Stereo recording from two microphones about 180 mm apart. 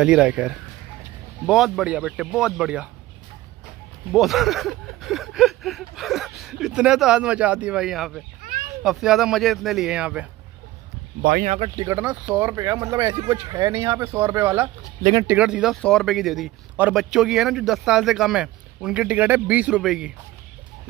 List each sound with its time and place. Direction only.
0.0 s speech: 5° right (ahead or behind)
4.1 s speech: centre (ahead or behind)
11.4 s speech: 40° right (ahead or behind)
11.8 s speech: 15° right (ahead or behind)